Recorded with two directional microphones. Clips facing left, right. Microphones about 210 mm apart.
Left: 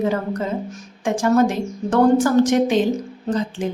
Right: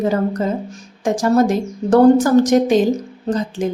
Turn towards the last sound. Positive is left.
turn(degrees=-40)  # may be behind; listen again after turning